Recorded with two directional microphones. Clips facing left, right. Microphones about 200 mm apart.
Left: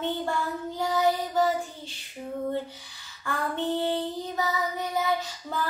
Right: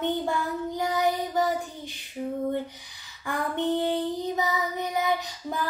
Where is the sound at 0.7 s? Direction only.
15° right (ahead or behind).